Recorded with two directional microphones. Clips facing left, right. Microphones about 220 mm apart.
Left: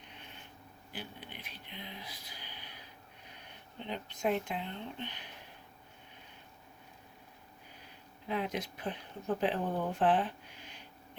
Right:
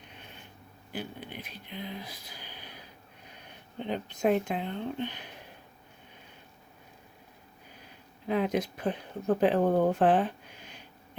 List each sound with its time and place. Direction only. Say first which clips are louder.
0.9 s speech: right 8 dB; 45° right (ahead or behind)
3.8 s speech: right 7 dB; 45° right (ahead or behind)
8.3 s speech: right 8 dB; 45° right (ahead or behind)